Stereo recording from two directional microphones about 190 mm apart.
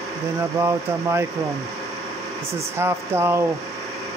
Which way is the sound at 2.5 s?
15° right (ahead or behind).